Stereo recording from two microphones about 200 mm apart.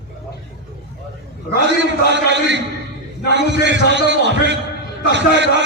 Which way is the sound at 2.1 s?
60° right (ahead or behind).